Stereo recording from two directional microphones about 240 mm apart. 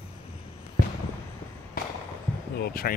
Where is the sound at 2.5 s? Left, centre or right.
Left.